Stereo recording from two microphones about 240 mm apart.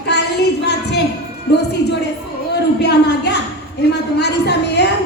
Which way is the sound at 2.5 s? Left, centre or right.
Left.